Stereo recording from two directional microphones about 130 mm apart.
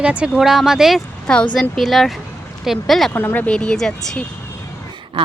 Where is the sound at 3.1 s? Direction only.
15° left (ahead or behind).